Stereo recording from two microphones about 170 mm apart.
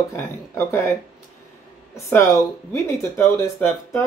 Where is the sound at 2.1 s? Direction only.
15° left (ahead or behind).